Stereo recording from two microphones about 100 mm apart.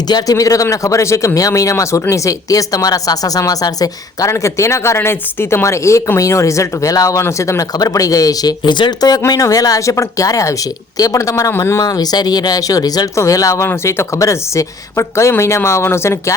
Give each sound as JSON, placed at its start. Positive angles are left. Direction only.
{"t": 0.1, "sound": "speech", "side_deg": 35}